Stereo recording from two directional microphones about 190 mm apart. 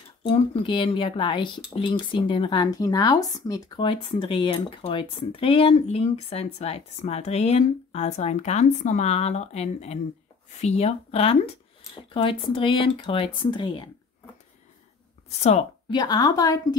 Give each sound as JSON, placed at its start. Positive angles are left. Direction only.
{"t": 0.2, "sound": "speech", "side_deg": 25}
{"t": 15.3, "sound": "speech", "side_deg": 35}
{"t": 15.9, "sound": "speech", "side_deg": 20}